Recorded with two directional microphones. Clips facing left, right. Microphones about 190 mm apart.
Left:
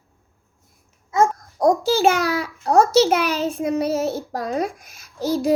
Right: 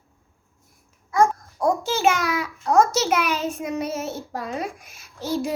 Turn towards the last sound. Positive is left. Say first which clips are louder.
# left 6 dB
turn(degrees=40)  # may be behind; listen again after turning